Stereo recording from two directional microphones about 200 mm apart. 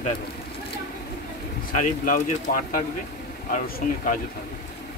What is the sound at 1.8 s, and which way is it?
Speech, 40° left (ahead or behind).